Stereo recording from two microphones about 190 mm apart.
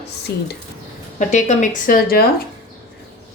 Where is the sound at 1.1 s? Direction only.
40° left (ahead or behind).